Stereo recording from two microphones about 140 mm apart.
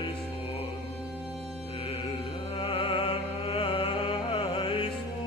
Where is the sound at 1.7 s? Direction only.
40° left (ahead or behind).